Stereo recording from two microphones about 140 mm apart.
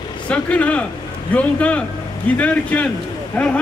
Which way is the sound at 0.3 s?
10° left (ahead or behind).